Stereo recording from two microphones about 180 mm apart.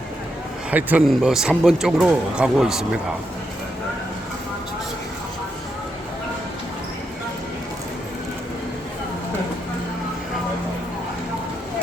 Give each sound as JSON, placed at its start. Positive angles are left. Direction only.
{"t": 0.7, "sound": "a man's voice", "side_deg": -10}